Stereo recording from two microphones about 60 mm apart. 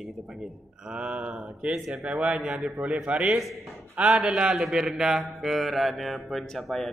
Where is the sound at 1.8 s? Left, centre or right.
Centre.